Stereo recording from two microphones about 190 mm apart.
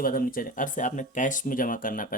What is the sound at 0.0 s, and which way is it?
Speech, 50° left (ahead or behind).